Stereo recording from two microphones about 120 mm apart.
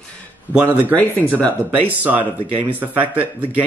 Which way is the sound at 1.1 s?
15° left (ahead or behind).